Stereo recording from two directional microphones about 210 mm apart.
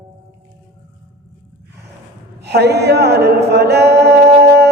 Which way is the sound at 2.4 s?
50° right (ahead or behind).